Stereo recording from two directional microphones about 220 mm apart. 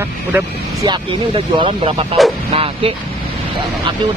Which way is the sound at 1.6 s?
25° right (ahead or behind).